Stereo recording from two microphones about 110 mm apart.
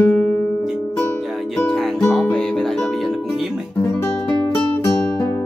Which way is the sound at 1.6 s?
5° left (ahead or behind).